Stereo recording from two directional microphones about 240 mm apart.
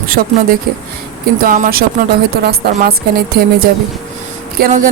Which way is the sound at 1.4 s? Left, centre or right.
Right.